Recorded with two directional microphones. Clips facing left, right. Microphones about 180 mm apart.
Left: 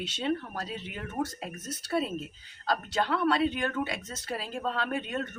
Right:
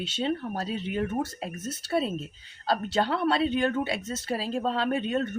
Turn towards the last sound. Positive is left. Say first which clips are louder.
# right 5 dB
turn(degrees=-25)  # may be behind; listen again after turning